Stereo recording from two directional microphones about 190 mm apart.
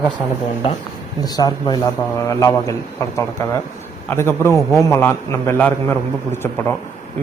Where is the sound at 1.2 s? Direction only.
20° left (ahead or behind).